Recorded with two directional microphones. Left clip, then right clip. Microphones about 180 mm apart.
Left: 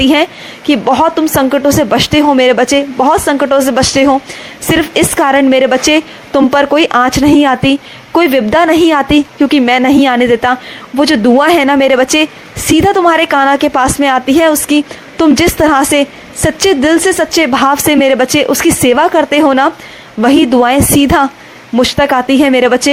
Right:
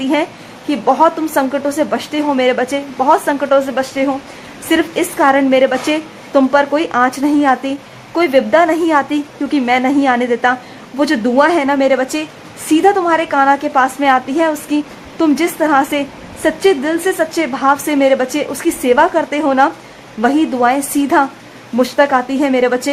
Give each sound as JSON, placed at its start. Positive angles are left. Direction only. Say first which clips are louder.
{"t": 0.0, "sound": "a woman's voice", "louder": "left 7 dB", "side_deg": 35}